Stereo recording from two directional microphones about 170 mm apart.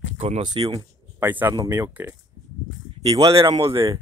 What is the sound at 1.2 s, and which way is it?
Speech, 10° right (ahead or behind).